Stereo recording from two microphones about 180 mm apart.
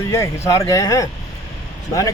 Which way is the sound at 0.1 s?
15° left (ahead or behind).